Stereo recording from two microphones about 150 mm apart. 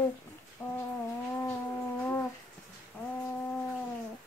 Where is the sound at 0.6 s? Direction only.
20° left (ahead or behind).